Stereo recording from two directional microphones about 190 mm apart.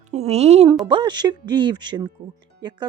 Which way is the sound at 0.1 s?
35° right (ahead or behind).